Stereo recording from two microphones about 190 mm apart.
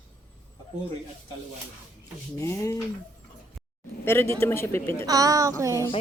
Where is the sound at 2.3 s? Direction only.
15° left (ahead or behind).